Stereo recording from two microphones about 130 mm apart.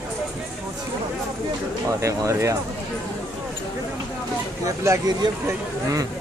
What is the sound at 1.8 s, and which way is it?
Speech, 25° right (ahead or behind).